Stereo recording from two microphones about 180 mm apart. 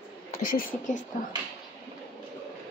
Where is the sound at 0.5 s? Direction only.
50° left (ahead or behind).